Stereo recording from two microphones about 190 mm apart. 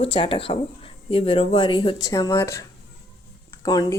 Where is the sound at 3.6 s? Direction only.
20° left (ahead or behind).